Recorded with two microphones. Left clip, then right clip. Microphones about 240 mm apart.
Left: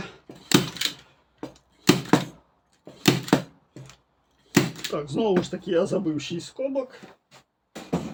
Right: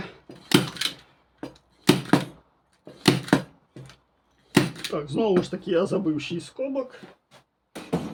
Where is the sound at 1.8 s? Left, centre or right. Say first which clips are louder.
Even; centre.